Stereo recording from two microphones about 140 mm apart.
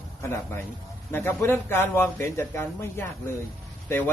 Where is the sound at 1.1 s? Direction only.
15° left (ahead or behind).